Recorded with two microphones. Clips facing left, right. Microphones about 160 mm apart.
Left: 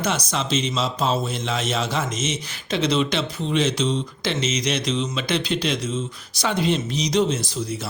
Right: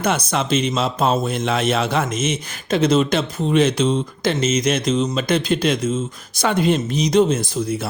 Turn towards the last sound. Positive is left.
turn(degrees=-50)  # may be behind; listen again after turning